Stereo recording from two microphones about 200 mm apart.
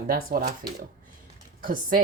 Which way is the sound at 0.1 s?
45° right (ahead or behind).